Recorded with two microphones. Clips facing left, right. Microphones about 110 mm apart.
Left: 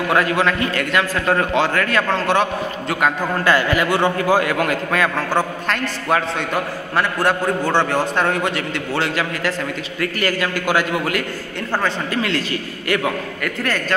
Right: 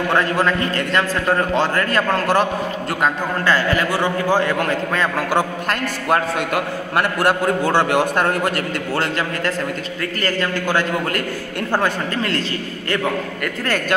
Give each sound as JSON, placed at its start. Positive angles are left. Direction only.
{"t": 0.1, "sound": "a man's voice", "side_deg": 5}
{"t": 3.4, "sound": "a man's voice", "side_deg": 15}
{"t": 5.3, "sound": "a man's voice", "side_deg": -5}
{"t": 10.2, "sound": "a man's voice", "side_deg": 10}
{"t": 12.2, "sound": "a man's voice", "side_deg": -40}